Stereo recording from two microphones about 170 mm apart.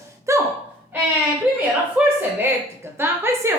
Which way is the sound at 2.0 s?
5° right (ahead or behind).